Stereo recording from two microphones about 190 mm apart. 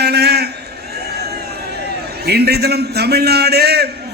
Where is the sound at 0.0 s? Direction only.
60° right (ahead or behind).